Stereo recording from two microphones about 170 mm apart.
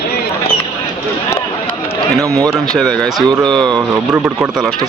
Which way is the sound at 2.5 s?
Centre (ahead or behind).